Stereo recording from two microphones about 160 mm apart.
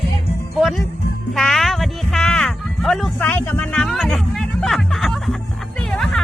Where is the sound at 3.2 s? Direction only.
10° left (ahead or behind).